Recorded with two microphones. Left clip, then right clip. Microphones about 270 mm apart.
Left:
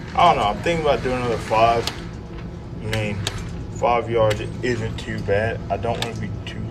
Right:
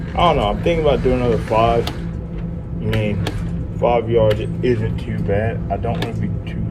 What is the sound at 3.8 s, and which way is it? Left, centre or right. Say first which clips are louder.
Speech: right 3 dB; left.